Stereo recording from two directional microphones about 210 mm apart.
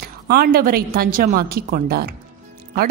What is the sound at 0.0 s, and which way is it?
A woman's voice, 45° right (ahead or behind).